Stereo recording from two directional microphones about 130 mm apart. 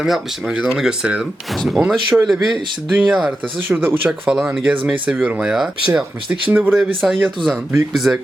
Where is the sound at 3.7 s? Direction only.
15° right (ahead or behind).